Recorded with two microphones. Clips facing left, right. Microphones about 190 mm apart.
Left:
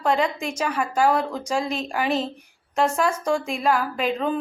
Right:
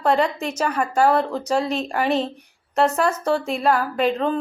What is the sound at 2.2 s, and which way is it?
A woman's voice, 10° left (ahead or behind).